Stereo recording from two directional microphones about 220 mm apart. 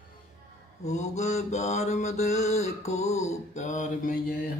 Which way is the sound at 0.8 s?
30° left (ahead or behind).